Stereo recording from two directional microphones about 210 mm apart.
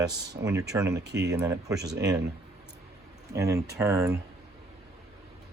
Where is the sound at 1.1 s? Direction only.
55° right (ahead or behind).